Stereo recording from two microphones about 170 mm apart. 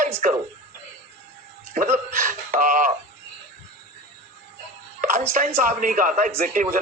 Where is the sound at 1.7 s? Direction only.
50° right (ahead or behind).